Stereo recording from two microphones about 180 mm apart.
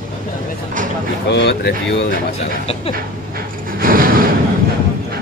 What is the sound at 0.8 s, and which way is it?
Speech, 45° right (ahead or behind).